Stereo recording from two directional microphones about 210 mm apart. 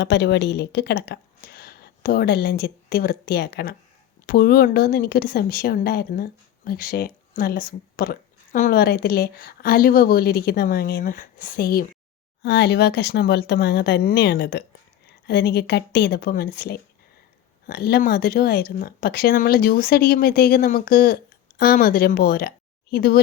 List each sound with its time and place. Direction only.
0.0 s speech: 55° left (ahead or behind)